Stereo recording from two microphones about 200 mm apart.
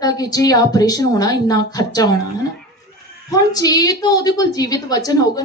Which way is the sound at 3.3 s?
20° left (ahead or behind).